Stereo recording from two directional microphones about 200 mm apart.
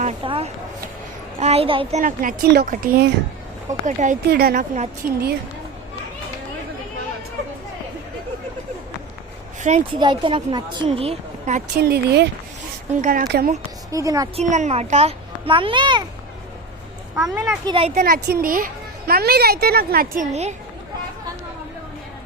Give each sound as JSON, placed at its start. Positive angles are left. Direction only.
{"t": 0.0, "sound": "a sound", "side_deg": -30}
{"t": 1.4, "sound": "a woman's voice", "side_deg": -30}
{"t": 4.3, "sound": "speech", "side_deg": -50}
{"t": 5.0, "sound": "a woman's voice", "side_deg": -10}
{"t": 9.6, "sound": "speech", "side_deg": -35}
{"t": 10.0, "sound": "a woman's voice", "side_deg": -25}
{"t": 11.8, "sound": "speech", "side_deg": -55}
{"t": 13.0, "sound": "speech", "side_deg": -45}
{"t": 13.9, "sound": "a woman's voice", "side_deg": -15}
{"t": 14.3, "sound": "a woman's voice", "side_deg": -35}
{"t": 17.2, "sound": "a child's voice", "side_deg": 0}
{"t": 17.7, "sound": "a woman's voice", "side_deg": -30}
{"t": 18.0, "sound": "speech", "side_deg": -50}